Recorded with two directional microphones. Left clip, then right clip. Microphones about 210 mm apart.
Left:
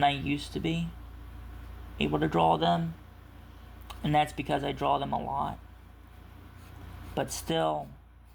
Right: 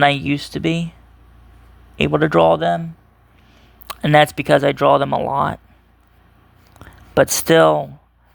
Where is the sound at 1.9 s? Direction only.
55° right (ahead or behind).